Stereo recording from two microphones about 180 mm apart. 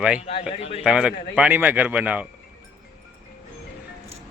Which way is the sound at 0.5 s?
35° left (ahead or behind).